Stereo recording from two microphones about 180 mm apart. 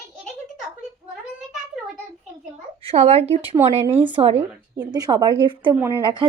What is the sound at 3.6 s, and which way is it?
Speech, 15° right (ahead or behind).